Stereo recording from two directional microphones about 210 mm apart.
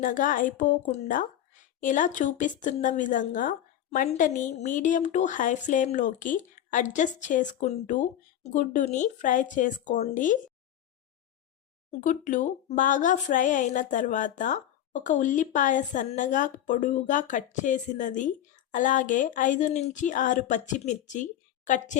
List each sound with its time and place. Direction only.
0.0 s speech: 40° left (ahead or behind)
11.9 s speech: 35° left (ahead or behind)